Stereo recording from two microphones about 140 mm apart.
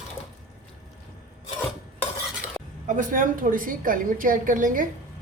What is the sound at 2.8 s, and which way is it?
A woman's voice, 70° right (ahead or behind).